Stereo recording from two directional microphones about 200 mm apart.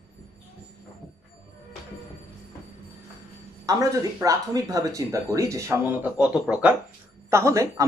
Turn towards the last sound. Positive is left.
turn(degrees=-15)  # may be behind; listen again after turning